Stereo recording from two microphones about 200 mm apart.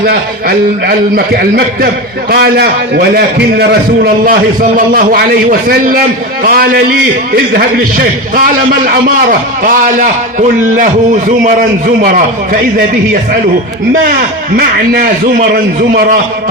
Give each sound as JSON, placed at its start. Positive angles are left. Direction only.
{"t": 0.0, "sound": "a man's voice", "side_deg": -50}
{"t": 10.8, "sound": "a man's voice", "side_deg": -40}
{"t": 14.5, "sound": "a man's voice", "side_deg": -45}